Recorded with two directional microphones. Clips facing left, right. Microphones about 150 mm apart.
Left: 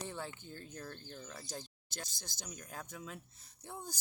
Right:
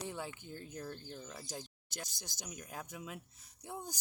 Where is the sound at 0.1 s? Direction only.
10° right (ahead or behind).